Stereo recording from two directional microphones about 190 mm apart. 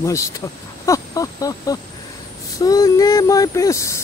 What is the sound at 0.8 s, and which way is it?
Vehicle, 15° left (ahead or behind).